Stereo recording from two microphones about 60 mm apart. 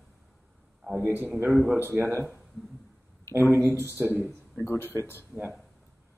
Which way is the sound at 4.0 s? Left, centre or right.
Right.